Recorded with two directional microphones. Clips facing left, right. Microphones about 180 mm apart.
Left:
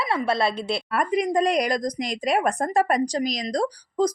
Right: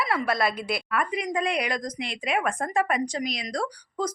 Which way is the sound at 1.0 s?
40° left (ahead or behind).